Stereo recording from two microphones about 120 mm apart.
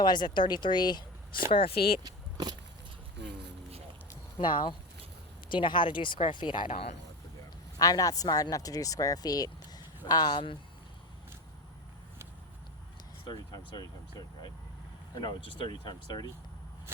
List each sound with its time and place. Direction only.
0.0 s speech: 40° left (ahead or behind)
1.5 s speech: 50° left (ahead or behind)
2.0 s a sound: 35° right (ahead or behind)
4.4 s speech: 40° left (ahead or behind)
6.7 s speech: 60° left (ahead or behind)
7.8 s speech: 30° left (ahead or behind)
13.2 s speech: 40° left (ahead or behind)